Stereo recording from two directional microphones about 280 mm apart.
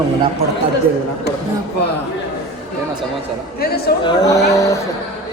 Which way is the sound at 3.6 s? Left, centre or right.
Left.